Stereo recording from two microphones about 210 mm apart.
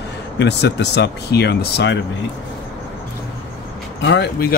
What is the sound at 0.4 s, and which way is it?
Speech, 55° left (ahead or behind).